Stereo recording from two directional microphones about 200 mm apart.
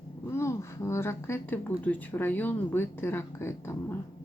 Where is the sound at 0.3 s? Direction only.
15° left (ahead or behind).